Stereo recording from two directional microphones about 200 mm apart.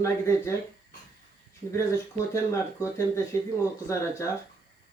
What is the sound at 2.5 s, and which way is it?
Speech, 15° left (ahead or behind).